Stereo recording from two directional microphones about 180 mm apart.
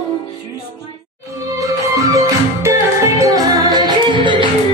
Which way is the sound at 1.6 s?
20° right (ahead or behind).